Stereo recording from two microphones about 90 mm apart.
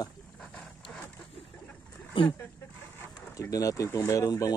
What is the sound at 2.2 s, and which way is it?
Speech, 70° left (ahead or behind).